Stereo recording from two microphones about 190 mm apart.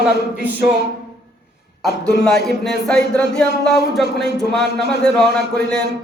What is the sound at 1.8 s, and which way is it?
A man's voice, 5° left (ahead or behind).